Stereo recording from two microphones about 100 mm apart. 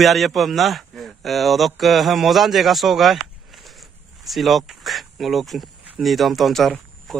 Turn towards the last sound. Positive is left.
turn(degrees=0)  # may be behind; listen again after turning